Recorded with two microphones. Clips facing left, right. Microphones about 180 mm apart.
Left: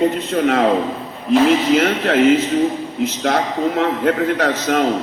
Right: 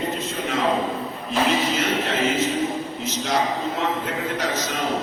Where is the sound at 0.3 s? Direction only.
60° left (ahead or behind).